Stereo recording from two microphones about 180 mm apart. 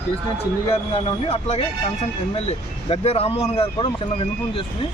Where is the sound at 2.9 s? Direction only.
35° left (ahead or behind).